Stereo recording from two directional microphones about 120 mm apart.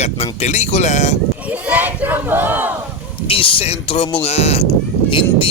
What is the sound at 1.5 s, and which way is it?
Speech, 15° right (ahead or behind).